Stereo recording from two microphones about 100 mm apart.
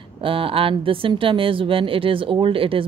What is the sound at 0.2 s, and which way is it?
Speech, 65° right (ahead or behind).